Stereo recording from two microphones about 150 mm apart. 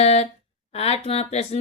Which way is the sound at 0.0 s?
45° left (ahead or behind).